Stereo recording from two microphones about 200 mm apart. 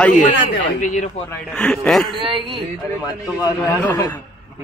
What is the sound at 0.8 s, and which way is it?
Speech, 40° left (ahead or behind).